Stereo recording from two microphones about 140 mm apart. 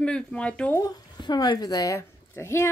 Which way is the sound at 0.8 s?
30° left (ahead or behind).